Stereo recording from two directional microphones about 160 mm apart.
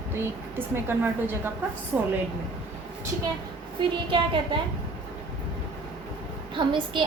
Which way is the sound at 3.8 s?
30° right (ahead or behind).